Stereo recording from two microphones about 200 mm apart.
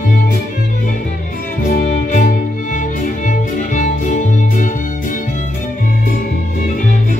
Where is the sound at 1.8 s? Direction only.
40° left (ahead or behind).